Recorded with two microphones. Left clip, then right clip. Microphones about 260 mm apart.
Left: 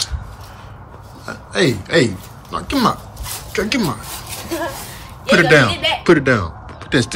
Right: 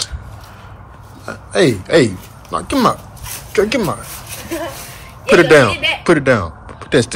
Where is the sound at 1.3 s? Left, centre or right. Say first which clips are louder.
Right 3 dB; centre.